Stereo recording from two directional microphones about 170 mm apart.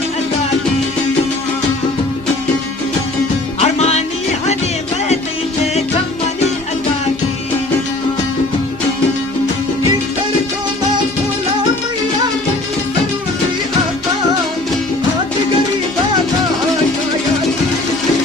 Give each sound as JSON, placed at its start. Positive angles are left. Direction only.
{"t": 3.6, "sound": "music", "side_deg": 40}